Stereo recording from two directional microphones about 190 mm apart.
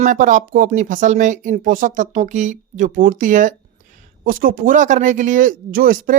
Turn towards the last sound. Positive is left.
turn(degrees=-50)  # may be behind; listen again after turning